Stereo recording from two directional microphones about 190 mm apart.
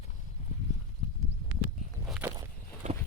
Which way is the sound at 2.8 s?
40° right (ahead or behind).